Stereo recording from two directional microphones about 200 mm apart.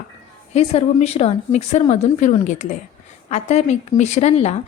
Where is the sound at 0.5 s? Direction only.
30° left (ahead or behind).